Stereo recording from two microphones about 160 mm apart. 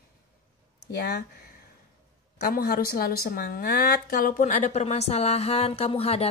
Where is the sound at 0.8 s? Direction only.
90° left.